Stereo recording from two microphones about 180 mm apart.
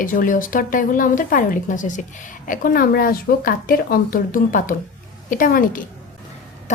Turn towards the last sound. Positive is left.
turn(degrees=50)  # may be behind; listen again after turning